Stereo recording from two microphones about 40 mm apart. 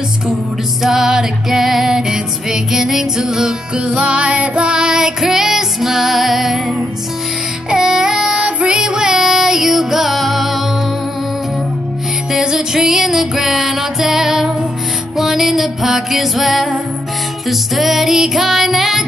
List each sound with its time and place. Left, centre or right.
0.8 s music: centre
3.7 s music: right; by 6.6 s centre
7.7 s child singing: centre
8.4 s music: right
8.7 s music: centre
12.3 s music: centre